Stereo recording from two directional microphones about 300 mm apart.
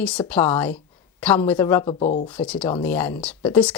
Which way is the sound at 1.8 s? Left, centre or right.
Centre.